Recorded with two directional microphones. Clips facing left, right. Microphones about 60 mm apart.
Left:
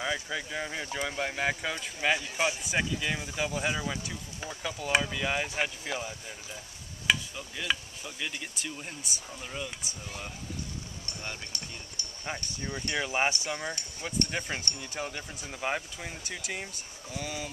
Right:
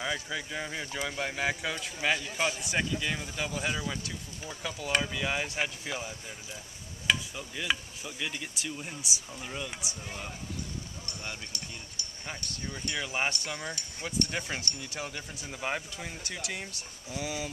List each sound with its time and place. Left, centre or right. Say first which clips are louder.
0.0 s speech: left 1 dB; centre
2.3 s speech: left 1 dB; centre
2.6 s speech: left 1 dB; centre
7.1 s insect: left 1 dB; centre
8.3 s speech: right 1 dB; centre
12.5 s speech: left 3 dB; centre
17.2 s speech: right 2 dB; centre